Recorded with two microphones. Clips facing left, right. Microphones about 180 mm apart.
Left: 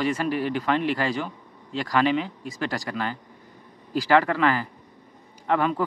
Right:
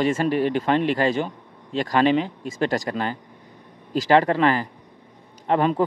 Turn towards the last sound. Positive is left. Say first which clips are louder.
# right 3 dB
turn(degrees=-25)  # may be behind; listen again after turning